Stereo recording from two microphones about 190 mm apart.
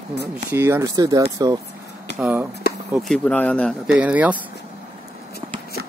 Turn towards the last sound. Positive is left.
turn(degrees=-10)  # may be behind; listen again after turning